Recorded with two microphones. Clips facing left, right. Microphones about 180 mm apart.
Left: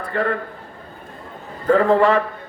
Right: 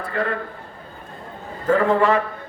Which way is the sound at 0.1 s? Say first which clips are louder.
Left 3 dB; 40° left (ahead or behind).